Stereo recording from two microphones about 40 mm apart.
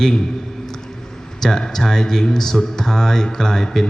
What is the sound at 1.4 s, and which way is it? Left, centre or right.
Speech, centre.